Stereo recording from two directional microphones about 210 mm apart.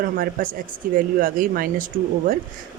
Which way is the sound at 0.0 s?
45° right (ahead or behind).